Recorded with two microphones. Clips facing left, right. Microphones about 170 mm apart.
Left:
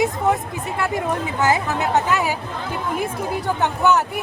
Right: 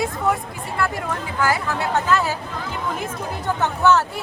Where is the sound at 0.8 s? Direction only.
20° left (ahead or behind).